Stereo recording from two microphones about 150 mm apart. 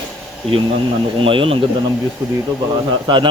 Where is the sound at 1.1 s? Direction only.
35° right (ahead or behind).